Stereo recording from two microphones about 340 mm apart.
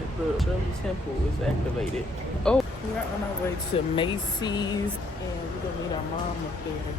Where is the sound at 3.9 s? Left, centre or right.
Centre.